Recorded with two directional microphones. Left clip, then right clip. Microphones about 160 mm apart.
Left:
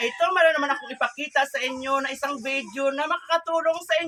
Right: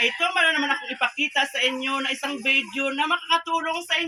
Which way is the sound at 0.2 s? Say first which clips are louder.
Left 1 dB; 30° left (ahead or behind).